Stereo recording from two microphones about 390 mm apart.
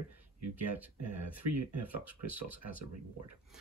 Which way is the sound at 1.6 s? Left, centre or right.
Right.